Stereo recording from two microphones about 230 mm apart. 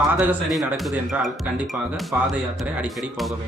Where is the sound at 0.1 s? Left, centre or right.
Centre.